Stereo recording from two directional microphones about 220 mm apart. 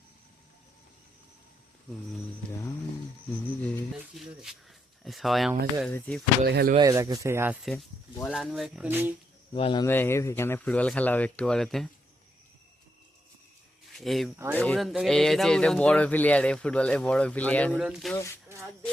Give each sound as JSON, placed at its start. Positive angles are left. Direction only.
{"t": 3.6, "sound": "speech", "side_deg": 0}
{"t": 6.4, "sound": "speech", "side_deg": -45}
{"t": 6.7, "sound": "speech", "side_deg": -15}
{"t": 7.7, "sound": "speech", "side_deg": 5}
{"t": 9.5, "sound": "speech", "side_deg": 25}
{"t": 9.8, "sound": "speech", "side_deg": 10}
{"t": 13.9, "sound": "speech", "side_deg": 0}